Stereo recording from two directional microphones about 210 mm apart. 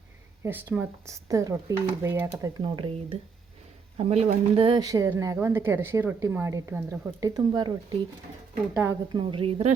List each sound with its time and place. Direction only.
0.4 s speech: 10° right (ahead or behind)
8.7 s speech: 10° right (ahead or behind)
9.1 s speech: 25° right (ahead or behind)